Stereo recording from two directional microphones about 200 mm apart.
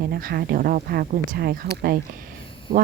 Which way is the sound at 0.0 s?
50° right (ahead or behind).